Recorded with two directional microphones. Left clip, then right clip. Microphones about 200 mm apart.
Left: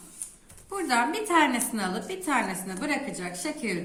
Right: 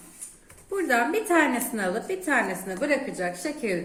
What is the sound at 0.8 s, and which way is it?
A woman's voice, 50° left (ahead or behind).